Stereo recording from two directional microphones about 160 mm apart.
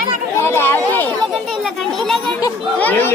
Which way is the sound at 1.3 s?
Centre (ahead or behind).